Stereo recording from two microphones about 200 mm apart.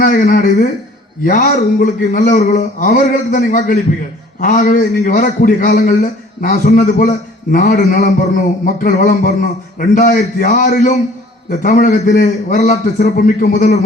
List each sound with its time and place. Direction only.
0.0 s a man's voice: 40° left (ahead or behind)
8.6 s a sound: 40° left (ahead or behind)
9.8 s a man's voice: 40° left (ahead or behind)